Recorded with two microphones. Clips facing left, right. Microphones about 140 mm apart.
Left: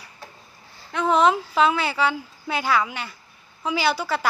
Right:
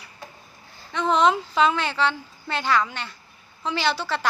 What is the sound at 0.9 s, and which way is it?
Speech, 5° left (ahead or behind).